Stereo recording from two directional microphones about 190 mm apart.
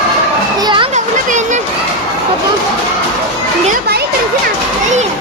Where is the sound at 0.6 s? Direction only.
25° right (ahead or behind).